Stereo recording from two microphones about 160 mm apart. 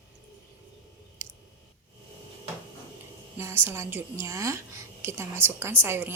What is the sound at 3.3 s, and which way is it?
Speech, 15° right (ahead or behind).